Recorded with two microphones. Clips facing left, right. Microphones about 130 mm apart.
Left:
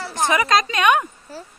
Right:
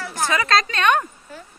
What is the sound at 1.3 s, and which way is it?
Speech, 35° left (ahead or behind).